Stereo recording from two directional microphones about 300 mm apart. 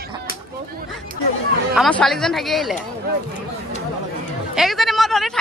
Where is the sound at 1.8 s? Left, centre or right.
Centre.